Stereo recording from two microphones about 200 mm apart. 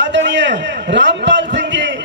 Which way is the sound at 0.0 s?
65° right (ahead or behind).